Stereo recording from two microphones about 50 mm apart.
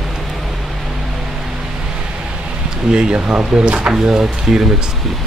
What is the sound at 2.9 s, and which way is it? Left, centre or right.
Speech, right.